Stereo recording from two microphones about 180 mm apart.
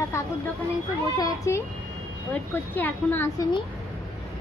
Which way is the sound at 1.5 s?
15° left (ahead or behind).